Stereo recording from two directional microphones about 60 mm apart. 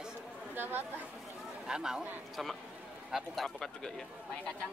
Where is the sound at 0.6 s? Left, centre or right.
Right.